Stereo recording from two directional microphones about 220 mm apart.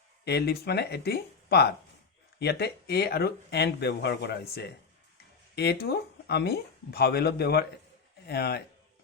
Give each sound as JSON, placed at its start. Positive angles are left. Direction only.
{"t": 0.3, "sound": "speech", "side_deg": 45}